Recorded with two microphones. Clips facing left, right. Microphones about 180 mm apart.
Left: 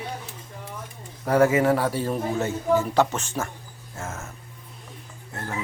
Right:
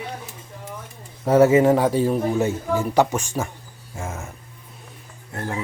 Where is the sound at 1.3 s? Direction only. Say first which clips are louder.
Right 5 dB; 25° right (ahead or behind).